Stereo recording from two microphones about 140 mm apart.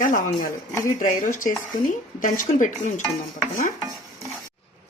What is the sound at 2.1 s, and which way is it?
Stir, 70° left (ahead or behind).